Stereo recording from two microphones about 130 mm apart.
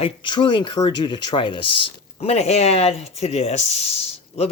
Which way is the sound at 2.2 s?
55° left (ahead or behind).